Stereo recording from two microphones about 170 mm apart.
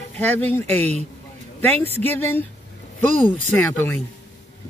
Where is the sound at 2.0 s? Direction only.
10° left (ahead or behind).